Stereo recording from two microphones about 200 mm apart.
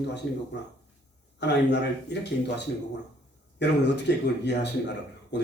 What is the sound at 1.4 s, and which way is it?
A man's voice, 60° left (ahead or behind).